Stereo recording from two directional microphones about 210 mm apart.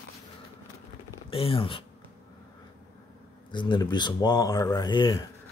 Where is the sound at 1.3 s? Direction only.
25° left (ahead or behind).